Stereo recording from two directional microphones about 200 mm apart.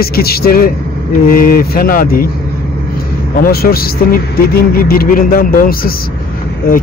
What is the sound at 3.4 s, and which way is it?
A man's voice, 50° left (ahead or behind).